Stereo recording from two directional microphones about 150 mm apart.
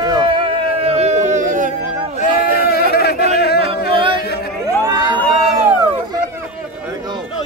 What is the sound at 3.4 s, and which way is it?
Music, 90° left.